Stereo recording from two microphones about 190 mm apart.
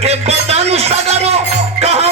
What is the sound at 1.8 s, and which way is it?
Music, 35° right (ahead or behind).